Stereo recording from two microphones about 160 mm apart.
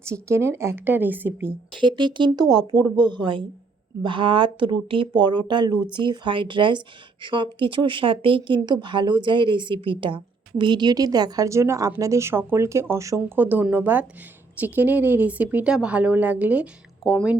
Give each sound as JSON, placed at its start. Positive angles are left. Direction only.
{"t": 0.0, "sound": "a woman's voice", "side_deg": -15}
{"t": 1.7, "sound": "a woman's voice", "side_deg": -30}